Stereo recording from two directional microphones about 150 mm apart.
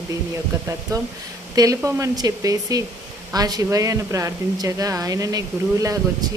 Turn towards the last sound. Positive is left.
turn(degrees=-25)  # may be behind; listen again after turning